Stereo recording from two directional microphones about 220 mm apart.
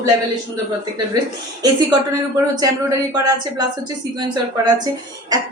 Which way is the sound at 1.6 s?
15° right (ahead or behind).